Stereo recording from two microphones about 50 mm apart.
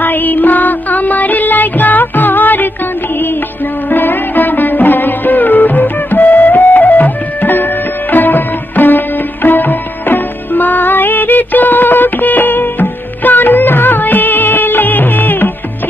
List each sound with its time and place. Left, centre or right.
0.0 s music: left
3.9 s music: left